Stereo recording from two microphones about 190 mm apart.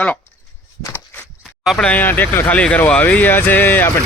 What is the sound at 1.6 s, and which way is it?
Speech, 5° left (ahead or behind).